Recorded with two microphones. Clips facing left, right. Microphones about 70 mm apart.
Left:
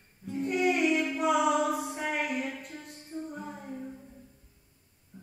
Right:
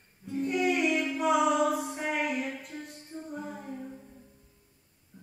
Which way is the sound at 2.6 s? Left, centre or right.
Centre.